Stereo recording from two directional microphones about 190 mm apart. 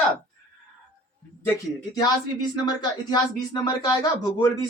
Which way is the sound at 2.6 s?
20° left (ahead or behind).